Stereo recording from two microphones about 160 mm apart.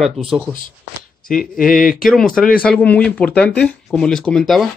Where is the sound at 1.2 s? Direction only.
Centre (ahead or behind).